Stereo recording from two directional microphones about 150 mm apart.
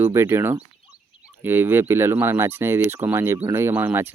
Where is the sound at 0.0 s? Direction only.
15° right (ahead or behind).